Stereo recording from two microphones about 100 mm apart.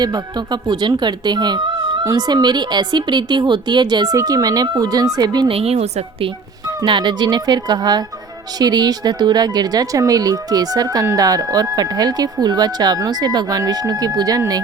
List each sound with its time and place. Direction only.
0.0 s speech: 45° right (ahead or behind)
5.5 s a woman's voice: 85° right
6.8 s speech: 50° right (ahead or behind)